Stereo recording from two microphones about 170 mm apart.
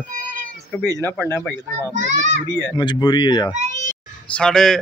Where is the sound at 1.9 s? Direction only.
45° right (ahead or behind).